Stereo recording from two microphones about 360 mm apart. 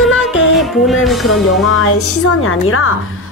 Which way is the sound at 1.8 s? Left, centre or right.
Left.